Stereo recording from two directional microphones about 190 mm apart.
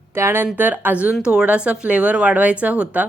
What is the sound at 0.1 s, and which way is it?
Speech, 15° right (ahead or behind).